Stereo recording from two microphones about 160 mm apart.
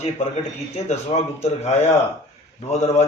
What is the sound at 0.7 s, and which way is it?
A man's voice, 45° left (ahead or behind).